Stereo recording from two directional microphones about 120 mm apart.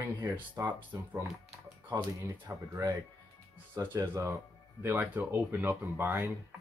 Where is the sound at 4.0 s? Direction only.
30° right (ahead or behind).